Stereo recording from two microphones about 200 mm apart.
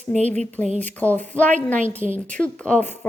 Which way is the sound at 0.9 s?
10° left (ahead or behind).